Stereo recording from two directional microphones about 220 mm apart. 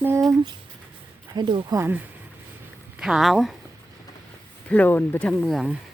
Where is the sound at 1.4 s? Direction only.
20° right (ahead or behind).